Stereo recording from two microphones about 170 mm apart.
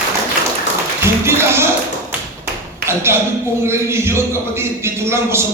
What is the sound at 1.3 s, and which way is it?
Speech, 15° right (ahead or behind).